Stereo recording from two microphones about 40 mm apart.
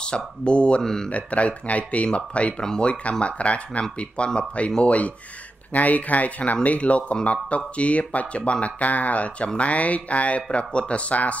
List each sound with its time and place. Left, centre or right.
0.0 s speech: left
0.8 s speech: centre
1.1 s speech: left
2.6 s speech: centre
2.9 s speech: left